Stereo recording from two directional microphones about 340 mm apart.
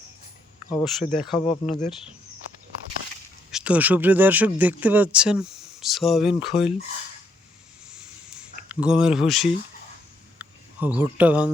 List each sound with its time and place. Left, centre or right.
0.7 s speech: centre
1.5 s speech: centre
3.5 s speech: centre
8.7 s speech: centre
10.3 s a sound: centre